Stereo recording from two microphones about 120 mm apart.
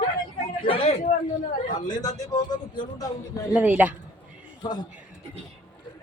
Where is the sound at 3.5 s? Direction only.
15° right (ahead or behind).